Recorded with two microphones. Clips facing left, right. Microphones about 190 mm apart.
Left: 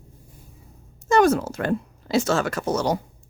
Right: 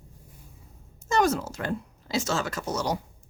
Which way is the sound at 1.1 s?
55° left (ahead or behind).